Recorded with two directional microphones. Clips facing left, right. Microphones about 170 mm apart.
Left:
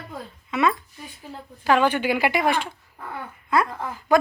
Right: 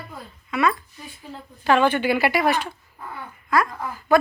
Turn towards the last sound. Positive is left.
turn(degrees=25)  # may be behind; listen again after turning